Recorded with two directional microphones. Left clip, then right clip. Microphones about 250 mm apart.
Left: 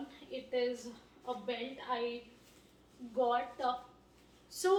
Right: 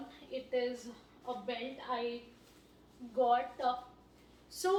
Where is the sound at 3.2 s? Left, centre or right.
Centre.